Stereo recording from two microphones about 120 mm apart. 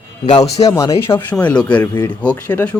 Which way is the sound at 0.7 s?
25° left (ahead or behind).